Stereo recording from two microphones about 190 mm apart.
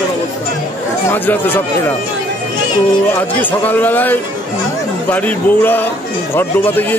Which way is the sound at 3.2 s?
10° left (ahead or behind).